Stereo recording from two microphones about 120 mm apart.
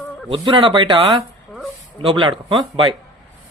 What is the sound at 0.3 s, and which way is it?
Speech, 45° right (ahead or behind).